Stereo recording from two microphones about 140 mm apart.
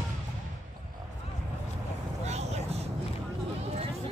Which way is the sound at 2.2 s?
50° right (ahead or behind).